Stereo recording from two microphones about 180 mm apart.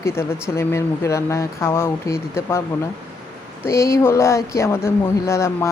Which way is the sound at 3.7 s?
15° left (ahead or behind).